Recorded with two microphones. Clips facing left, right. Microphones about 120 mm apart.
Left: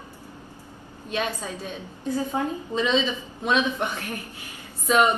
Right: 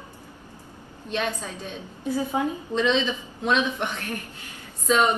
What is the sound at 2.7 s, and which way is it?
A woman's voice, 10° left (ahead or behind).